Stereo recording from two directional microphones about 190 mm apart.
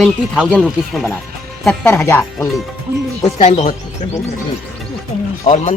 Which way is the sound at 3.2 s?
40° left (ahead or behind).